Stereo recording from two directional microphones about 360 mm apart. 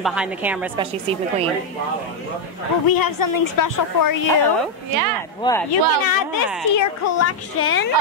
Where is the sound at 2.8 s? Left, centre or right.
Left.